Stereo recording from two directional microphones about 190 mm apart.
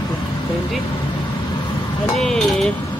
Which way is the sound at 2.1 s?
5° left (ahead or behind).